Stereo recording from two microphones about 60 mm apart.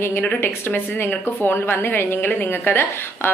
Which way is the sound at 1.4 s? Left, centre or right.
Left.